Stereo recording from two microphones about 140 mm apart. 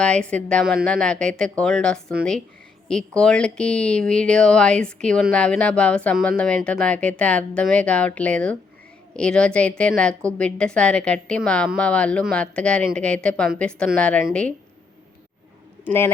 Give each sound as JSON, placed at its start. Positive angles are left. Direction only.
{"t": 0.0, "sound": "speech", "side_deg": 5}
{"t": 3.2, "sound": "speech", "side_deg": 5}
{"t": 15.8, "sound": "a man's voice", "side_deg": 15}